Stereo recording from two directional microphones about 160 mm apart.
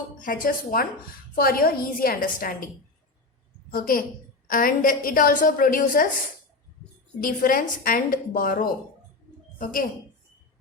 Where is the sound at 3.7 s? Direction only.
60° left (ahead or behind).